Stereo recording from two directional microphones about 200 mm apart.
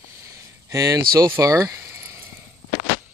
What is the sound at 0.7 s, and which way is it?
Speech, 15° right (ahead or behind).